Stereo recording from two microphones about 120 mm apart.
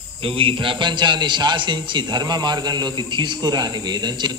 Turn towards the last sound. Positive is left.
turn(degrees=-35)  # may be behind; listen again after turning